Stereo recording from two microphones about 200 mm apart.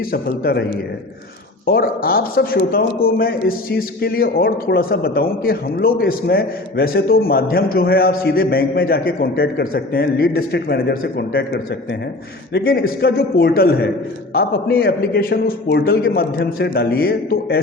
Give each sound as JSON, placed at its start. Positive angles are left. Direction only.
{"t": 0.0, "sound": "a man's voice", "side_deg": 50}
{"t": 1.6, "sound": "a man's voice", "side_deg": 50}